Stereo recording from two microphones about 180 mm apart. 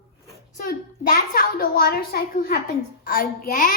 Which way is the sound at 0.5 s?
55° left (ahead or behind).